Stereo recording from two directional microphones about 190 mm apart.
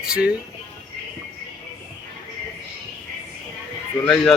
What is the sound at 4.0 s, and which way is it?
Speech, 10° left (ahead or behind).